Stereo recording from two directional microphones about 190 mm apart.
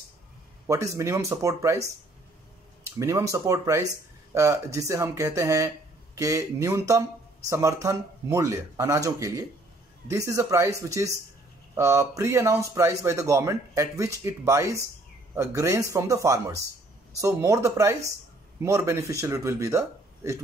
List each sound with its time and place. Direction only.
0.7 s speech: 15° right (ahead or behind)